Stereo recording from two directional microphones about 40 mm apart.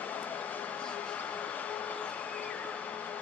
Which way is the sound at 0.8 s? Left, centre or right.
Left.